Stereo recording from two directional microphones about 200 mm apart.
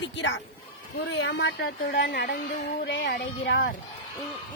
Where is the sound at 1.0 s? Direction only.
60° left (ahead or behind).